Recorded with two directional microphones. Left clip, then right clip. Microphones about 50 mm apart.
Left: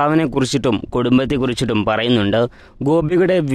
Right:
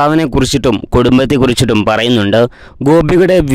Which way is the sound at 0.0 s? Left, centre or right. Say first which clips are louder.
Right 5 dB; right.